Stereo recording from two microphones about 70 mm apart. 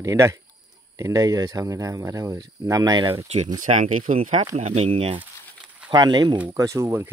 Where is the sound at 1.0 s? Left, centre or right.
Right.